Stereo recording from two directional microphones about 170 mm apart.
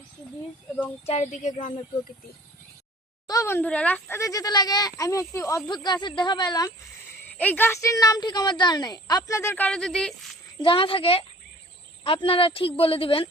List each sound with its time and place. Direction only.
1.0 s speech: 40° left (ahead or behind)
3.2 s speech: 20° left (ahead or behind)
7.3 s speech: 10° left (ahead or behind)
10.6 s speech: 30° left (ahead or behind)